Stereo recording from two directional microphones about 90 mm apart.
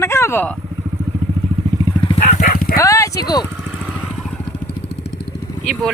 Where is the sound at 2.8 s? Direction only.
35° left (ahead or behind).